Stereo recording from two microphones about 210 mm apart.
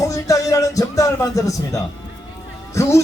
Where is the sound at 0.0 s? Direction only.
15° left (ahead or behind).